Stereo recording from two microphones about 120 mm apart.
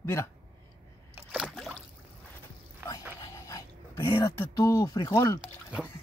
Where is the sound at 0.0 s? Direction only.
20° left (ahead or behind).